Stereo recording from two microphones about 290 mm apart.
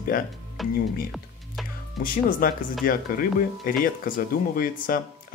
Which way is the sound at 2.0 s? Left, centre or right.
Left.